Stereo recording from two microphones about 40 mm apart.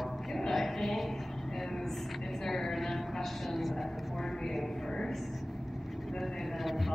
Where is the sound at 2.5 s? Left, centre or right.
Centre.